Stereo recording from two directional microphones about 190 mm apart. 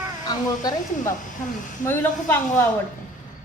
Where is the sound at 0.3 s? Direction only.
20° left (ahead or behind).